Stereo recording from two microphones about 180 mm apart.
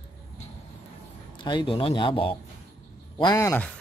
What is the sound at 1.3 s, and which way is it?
Speech, 25° left (ahead or behind).